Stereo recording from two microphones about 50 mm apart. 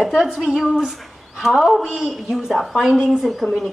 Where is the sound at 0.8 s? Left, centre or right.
Centre.